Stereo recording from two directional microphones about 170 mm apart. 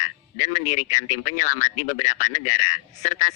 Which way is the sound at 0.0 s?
45° left (ahead or behind).